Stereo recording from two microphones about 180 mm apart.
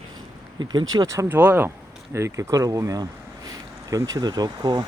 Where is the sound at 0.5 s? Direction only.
25° right (ahead or behind).